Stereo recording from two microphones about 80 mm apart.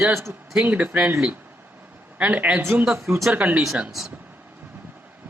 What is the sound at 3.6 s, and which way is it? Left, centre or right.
Speech, centre.